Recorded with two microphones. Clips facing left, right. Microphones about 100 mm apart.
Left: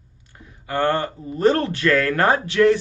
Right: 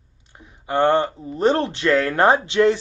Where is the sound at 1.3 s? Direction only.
20° right (ahead or behind).